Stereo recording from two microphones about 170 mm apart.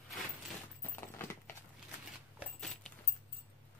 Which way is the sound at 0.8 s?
15° left (ahead or behind).